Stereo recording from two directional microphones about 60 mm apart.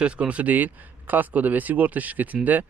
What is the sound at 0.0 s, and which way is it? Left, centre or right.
Speech, centre.